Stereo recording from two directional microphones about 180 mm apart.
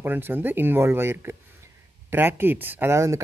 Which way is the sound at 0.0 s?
10° right (ahead or behind).